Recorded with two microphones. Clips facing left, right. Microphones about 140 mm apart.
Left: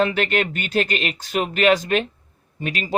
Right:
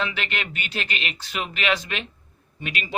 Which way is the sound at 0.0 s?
45° left (ahead or behind).